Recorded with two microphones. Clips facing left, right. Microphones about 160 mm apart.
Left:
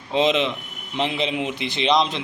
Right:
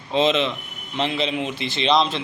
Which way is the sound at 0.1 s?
15° left (ahead or behind).